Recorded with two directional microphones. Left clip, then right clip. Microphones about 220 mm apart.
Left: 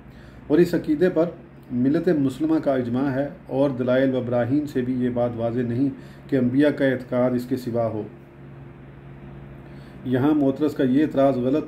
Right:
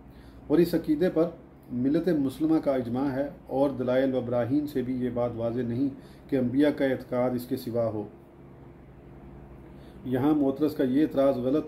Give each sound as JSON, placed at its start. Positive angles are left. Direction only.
{"t": 0.5, "sound": "speech", "side_deg": 10}
{"t": 10.0, "sound": "speech", "side_deg": 5}